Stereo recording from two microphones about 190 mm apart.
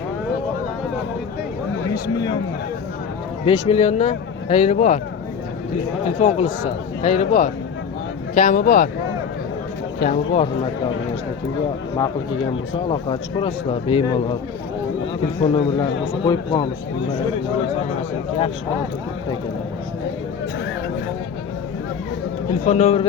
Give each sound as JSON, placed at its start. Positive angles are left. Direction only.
{"t": 3.4, "sound": "speech", "side_deg": 35}
{"t": 6.1, "sound": "speech", "side_deg": 35}
{"t": 10.0, "sound": "speech", "side_deg": 40}
{"t": 12.9, "sound": "a man's voice", "side_deg": 30}
{"t": 15.4, "sound": "a man's voice", "side_deg": 30}
{"t": 22.6, "sound": "speech", "side_deg": 35}